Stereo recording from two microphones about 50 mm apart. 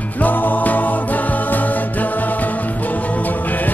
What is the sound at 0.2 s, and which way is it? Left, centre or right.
Music, left.